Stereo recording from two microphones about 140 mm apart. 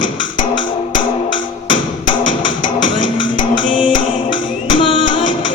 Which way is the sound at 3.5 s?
35° left (ahead or behind).